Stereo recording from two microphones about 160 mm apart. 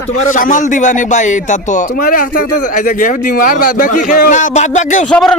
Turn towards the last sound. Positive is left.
turn(degrees=5)  # may be behind; listen again after turning